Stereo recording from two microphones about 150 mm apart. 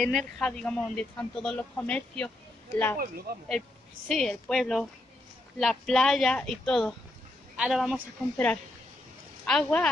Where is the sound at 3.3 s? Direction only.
90° right.